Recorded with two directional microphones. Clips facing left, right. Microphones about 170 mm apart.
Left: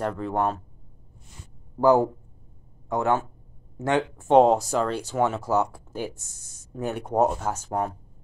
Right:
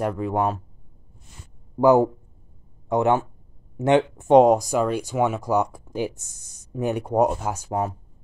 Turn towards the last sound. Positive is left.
turn(degrees=-10)  # may be behind; listen again after turning